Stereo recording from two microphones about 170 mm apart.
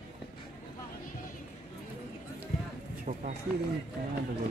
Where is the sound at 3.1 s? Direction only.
55° right (ahead or behind).